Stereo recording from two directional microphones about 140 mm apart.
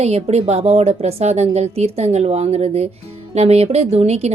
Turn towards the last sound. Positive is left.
turn(degrees=-50)  # may be behind; listen again after turning